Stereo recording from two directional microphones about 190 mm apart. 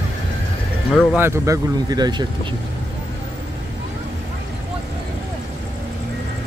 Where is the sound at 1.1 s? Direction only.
15° right (ahead or behind).